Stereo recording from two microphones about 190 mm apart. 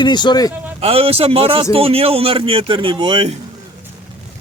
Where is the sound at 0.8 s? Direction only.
30° right (ahead or behind).